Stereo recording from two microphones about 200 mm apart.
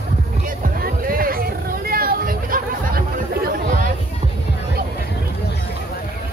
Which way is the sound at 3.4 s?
45° right (ahead or behind).